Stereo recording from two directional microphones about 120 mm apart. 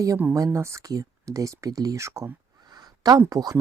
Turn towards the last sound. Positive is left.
turn(degrees=-30)  # may be behind; listen again after turning